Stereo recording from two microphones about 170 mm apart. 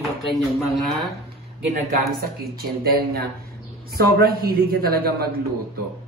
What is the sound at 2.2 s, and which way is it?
A man's voice, 65° right (ahead or behind).